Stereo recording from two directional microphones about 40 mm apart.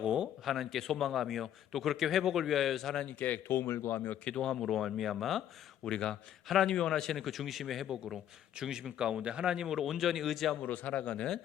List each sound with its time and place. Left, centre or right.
0.0 s a sound: right
0.4 s a man's voice: centre
3.1 s speech: left
3.5 s speech: left
3.9 s speech: left
4.4 s speech: centre
4.6 s a man's voice: centre
5.8 s a man's voice: centre
9.0 s speech: centre
9.7 s a man's voice: centre
10.6 s speech: left